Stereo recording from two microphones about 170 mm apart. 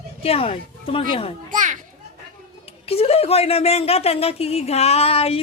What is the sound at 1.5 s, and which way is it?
Children playing, 50° right (ahead or behind).